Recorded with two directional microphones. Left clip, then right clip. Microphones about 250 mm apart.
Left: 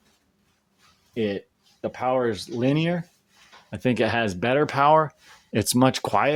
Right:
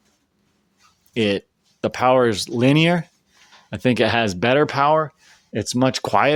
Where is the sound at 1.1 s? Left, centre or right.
Right.